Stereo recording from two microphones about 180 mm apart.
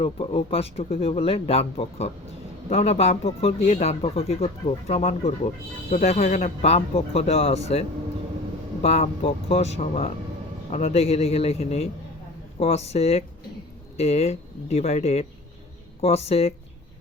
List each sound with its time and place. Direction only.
0.0 s speech: 30° left (ahead or behind)